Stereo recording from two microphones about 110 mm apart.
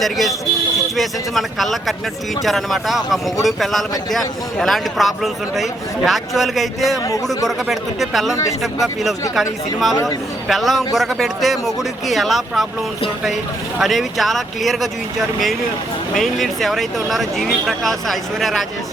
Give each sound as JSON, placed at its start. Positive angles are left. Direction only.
{"t": 0.0, "sound": "speech", "side_deg": 0}
{"t": 9.9, "sound": "speech", "side_deg": 30}
{"t": 10.5, "sound": "speech", "side_deg": 0}
{"t": 13.7, "sound": "speech", "side_deg": 0}
{"t": 16.1, "sound": "speech", "side_deg": 0}